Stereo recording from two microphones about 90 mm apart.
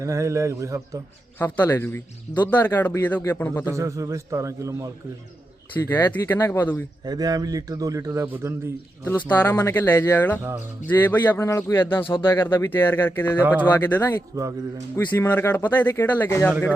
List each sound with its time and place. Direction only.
0.0 s a man's voice: 35° right (ahead or behind)
1.4 s a man's voice: 20° left (ahead or behind)
3.7 s a man's voice: 35° right (ahead or behind)
5.8 s a man's voice: 20° left (ahead or behind)
7.0 s a man's voice: 45° right (ahead or behind); by 8.7 s 30° right (ahead or behind)
9.0 s a man's voice: 20° left (ahead or behind)
14.3 s a man's voice: 35° right (ahead or behind)
15.1 s a man's voice: 25° left (ahead or behind)